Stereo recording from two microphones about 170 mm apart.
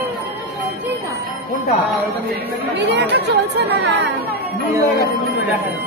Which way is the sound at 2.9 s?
80° right.